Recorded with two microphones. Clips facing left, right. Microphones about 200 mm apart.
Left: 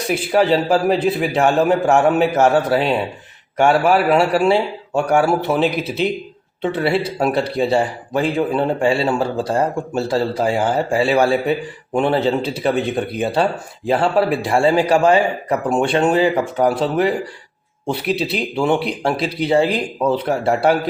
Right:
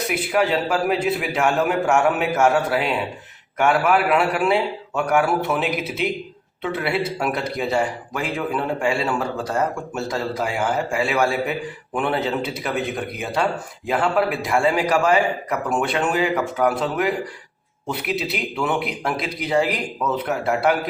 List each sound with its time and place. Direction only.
0.1 s a man's voice: 30° left (ahead or behind)